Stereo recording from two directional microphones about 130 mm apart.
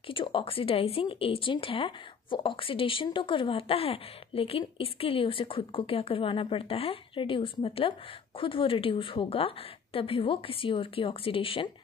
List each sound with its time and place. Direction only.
0.0 s a woman's voice: 40° left (ahead or behind)